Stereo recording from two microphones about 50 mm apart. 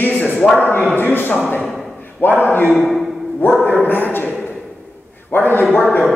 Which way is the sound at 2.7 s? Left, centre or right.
Centre.